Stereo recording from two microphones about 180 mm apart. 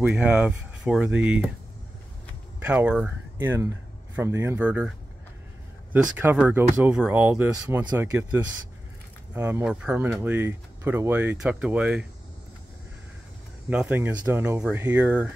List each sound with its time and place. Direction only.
0.0 s speech: 5° right (ahead or behind)
2.6 s speech: 5° right (ahead or behind)
6.1 s speech: 10° right (ahead or behind)
9.3 s speech: 10° right (ahead or behind)
13.7 s speech: 5° right (ahead or behind)